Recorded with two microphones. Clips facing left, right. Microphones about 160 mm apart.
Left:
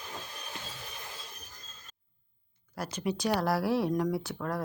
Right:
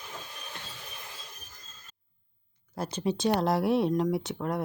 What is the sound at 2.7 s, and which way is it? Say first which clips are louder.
Speech: right 3 dB; 25° right (ahead or behind).